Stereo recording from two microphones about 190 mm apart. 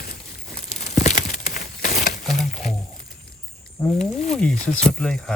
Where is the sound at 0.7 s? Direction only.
40° left (ahead or behind).